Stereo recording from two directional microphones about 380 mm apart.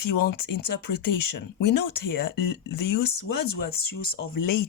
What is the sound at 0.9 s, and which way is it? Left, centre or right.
Speech, left.